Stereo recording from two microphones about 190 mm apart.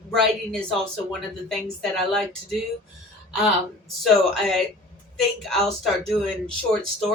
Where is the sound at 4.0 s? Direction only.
Centre (ahead or behind).